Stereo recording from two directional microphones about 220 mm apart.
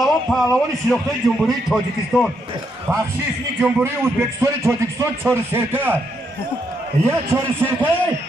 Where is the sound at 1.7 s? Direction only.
Centre (ahead or behind).